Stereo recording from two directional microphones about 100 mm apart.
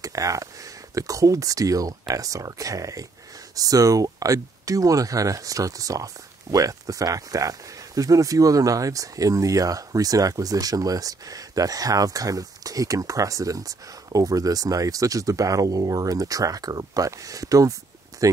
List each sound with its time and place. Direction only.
0.0 s speech: 35° right (ahead or behind)